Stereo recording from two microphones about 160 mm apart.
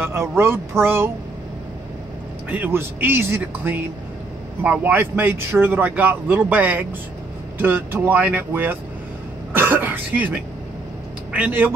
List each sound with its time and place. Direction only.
0.0 s speech: 15° right (ahead or behind)
2.5 s speech: 10° right (ahead or behind)
9.5 s cough: 10° right (ahead or behind)
11.3 s speech: 10° right (ahead or behind)